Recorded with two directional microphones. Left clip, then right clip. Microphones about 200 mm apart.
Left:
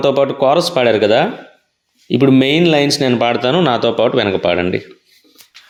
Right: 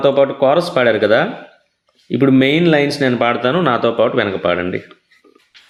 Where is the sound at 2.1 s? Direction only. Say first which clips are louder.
Left 1 dB; 35° left (ahead or behind).